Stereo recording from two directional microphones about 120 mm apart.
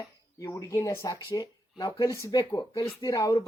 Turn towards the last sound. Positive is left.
turn(degrees=30)  # may be behind; listen again after turning